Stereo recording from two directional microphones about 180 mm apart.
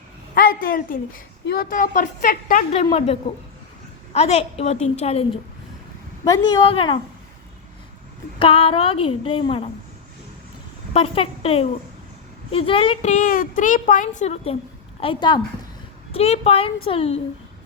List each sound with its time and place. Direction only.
0.3 s a woman's voice: 55° left (ahead or behind); by 5.2 s 35° left (ahead or behind)
6.2 s a woman's voice: 25° left (ahead or behind)
8.4 s a woman's voice: 30° left (ahead or behind)
10.9 s a woman's voice: 30° left (ahead or behind)
15.0 s a woman's voice: 25° left (ahead or behind)